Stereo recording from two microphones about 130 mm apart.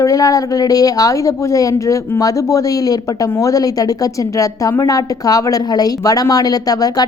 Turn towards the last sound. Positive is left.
turn(degrees=30)  # may be behind; listen again after turning